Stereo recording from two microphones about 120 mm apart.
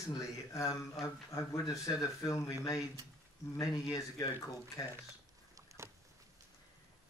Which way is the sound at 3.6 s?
30° left (ahead or behind).